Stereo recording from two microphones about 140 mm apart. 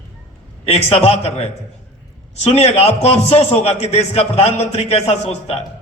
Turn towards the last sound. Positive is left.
turn(degrees=50)  # may be behind; listen again after turning